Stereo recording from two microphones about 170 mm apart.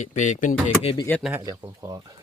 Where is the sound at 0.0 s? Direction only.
45° left (ahead or behind).